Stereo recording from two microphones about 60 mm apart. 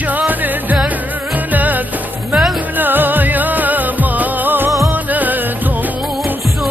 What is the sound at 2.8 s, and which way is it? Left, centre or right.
Music, right.